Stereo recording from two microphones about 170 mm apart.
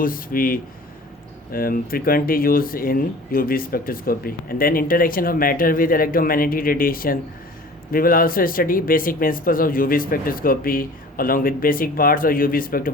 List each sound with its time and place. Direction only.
0.0 s speech: 55° left (ahead or behind)